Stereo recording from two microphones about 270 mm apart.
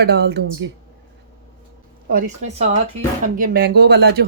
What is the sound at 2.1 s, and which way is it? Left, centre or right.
A woman's voice, right.